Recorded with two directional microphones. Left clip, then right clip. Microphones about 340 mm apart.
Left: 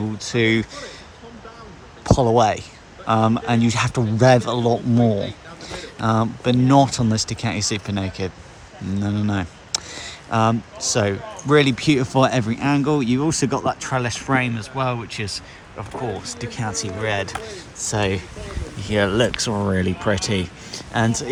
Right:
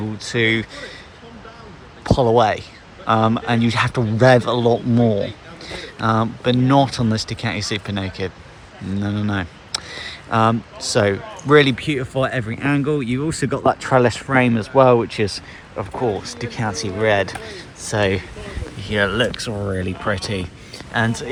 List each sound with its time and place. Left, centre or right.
0.3 s speech: centre
2.0 s speech: centre